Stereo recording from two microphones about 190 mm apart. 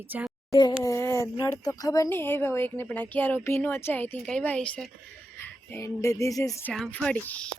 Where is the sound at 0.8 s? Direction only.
15° left (ahead or behind).